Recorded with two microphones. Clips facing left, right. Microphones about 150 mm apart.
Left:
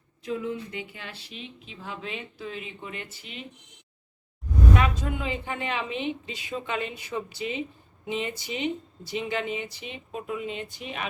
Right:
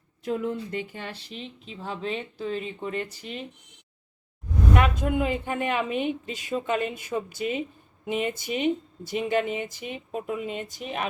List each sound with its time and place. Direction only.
0.2 s speech: 45° right (ahead or behind)
4.8 s speech: 55° right (ahead or behind)